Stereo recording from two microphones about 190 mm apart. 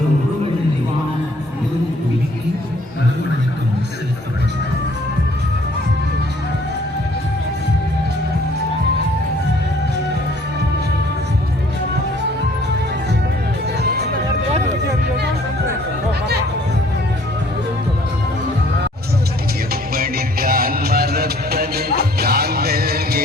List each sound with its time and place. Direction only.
13.8 s music: 60° right (ahead or behind)
19.9 s music: 50° right (ahead or behind)